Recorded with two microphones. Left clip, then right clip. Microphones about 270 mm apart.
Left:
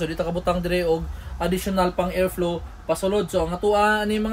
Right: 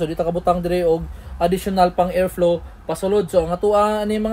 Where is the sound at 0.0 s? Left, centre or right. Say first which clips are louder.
Right 5 dB; centre.